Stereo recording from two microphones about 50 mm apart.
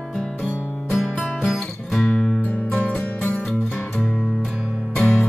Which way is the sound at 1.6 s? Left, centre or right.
Centre.